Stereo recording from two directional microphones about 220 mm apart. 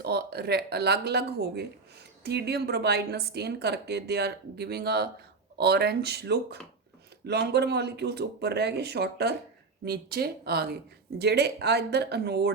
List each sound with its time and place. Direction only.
0.0 s speech: 45° right (ahead or behind)